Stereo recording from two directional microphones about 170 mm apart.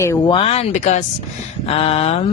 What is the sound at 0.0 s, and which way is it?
Speech, 15° left (ahead or behind).